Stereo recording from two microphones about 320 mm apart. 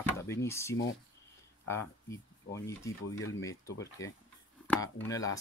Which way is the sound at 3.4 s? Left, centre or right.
Centre.